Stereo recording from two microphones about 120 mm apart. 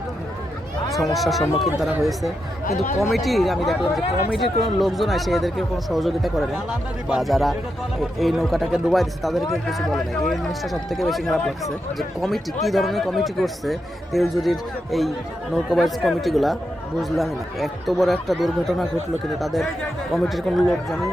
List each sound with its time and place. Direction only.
1.1 s speech: centre (ahead or behind)
2.6 s speech: 90° left
3.0 s speech: centre (ahead or behind)